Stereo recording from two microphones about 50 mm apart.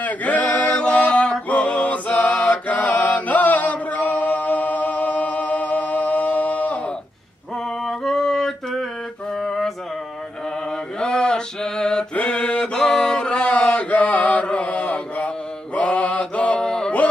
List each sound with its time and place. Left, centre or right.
0.0 s male singing: left
2.5 s chant: left
7.8 s a sound: centre
9.4 s music: centre
11.0 s mantra: centre
16.6 s music: centre